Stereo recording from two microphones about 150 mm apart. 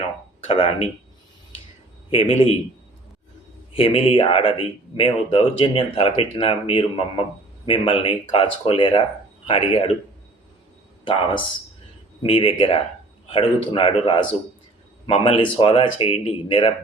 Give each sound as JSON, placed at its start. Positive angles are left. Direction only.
{"t": 0.4, "sound": "speech", "side_deg": 40}
{"t": 2.0, "sound": "speech", "side_deg": 40}
{"t": 3.7, "sound": "speech", "side_deg": 40}
{"t": 11.0, "sound": "speech", "side_deg": 35}